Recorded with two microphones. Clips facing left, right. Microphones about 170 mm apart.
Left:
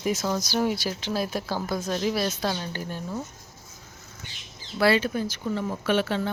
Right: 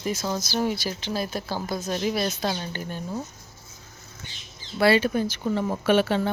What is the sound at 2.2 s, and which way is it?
Speech, 15° right (ahead or behind).